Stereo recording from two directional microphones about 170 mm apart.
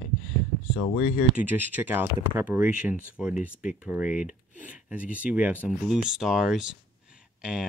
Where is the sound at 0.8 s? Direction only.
40° left (ahead or behind).